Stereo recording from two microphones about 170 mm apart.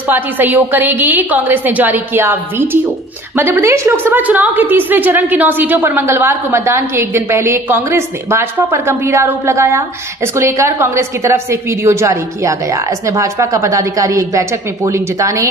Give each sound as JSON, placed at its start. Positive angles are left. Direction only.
{"t": 0.1, "sound": "a woman's voice", "side_deg": -10}